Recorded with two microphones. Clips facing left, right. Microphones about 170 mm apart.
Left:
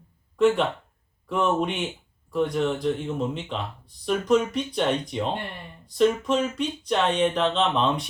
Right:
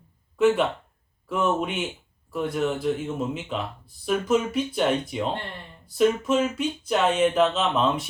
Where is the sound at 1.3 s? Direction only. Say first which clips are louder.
Left 1 dB; 5° right (ahead or behind).